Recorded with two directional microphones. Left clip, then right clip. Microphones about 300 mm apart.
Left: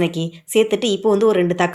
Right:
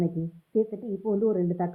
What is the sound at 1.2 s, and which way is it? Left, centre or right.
Speech, centre.